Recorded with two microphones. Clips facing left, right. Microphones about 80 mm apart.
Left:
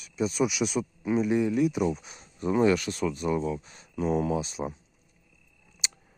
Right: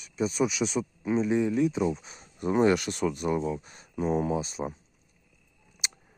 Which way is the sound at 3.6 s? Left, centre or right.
Right.